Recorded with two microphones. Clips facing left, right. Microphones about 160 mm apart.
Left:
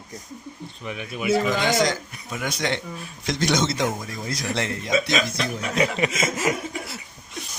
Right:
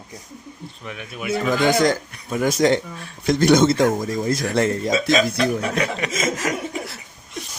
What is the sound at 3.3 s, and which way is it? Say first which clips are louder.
Speech: right 8 dB; 50° right (ahead or behind).